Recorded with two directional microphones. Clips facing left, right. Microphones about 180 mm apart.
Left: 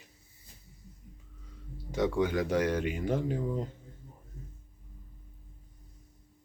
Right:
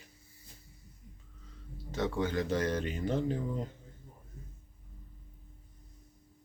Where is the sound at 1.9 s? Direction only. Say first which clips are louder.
Left 4 dB; 10° left (ahead or behind).